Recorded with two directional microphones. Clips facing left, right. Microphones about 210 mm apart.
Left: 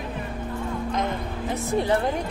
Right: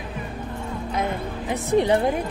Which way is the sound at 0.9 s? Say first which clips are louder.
Right 5 dB; 10° right (ahead or behind).